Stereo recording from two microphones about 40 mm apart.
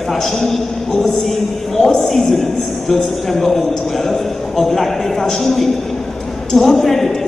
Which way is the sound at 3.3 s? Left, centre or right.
Centre.